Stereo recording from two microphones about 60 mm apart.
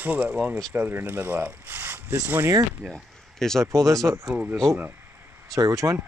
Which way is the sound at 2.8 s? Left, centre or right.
Centre.